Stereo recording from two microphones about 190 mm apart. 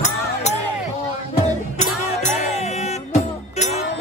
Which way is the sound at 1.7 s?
40° left (ahead or behind).